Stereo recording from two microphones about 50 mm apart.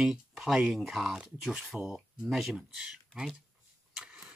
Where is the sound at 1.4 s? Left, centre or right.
Centre.